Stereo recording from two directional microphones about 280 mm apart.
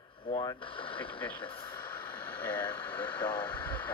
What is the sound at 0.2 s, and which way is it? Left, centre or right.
Speech, centre.